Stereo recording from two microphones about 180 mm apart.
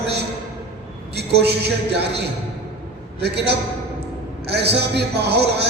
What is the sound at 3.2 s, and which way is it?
A man's voice, 65° right (ahead or behind).